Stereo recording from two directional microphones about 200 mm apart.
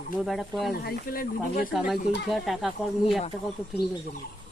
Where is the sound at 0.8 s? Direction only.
45° left (ahead or behind).